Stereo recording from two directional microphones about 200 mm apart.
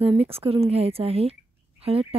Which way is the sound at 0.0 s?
30° right (ahead or behind).